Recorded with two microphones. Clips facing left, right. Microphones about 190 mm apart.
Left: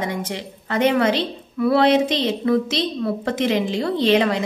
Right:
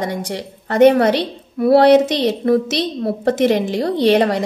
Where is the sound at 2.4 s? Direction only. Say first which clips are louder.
Right 3 dB; 40° right (ahead or behind).